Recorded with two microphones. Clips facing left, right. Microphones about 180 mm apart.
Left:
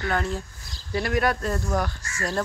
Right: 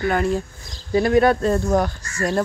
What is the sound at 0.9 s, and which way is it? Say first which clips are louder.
Speech: right 8 dB; 25° right (ahead or behind).